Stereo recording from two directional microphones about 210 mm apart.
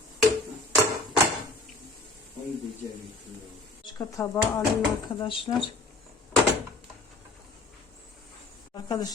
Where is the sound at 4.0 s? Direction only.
15° left (ahead or behind).